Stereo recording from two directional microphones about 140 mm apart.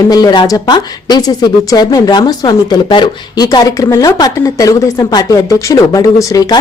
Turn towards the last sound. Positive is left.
turn(degrees=25)  # may be behind; listen again after turning